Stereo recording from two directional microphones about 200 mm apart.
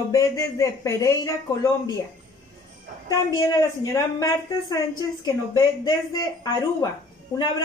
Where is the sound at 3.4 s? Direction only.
15° left (ahead or behind).